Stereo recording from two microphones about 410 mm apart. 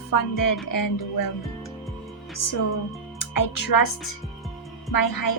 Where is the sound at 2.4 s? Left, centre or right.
Left.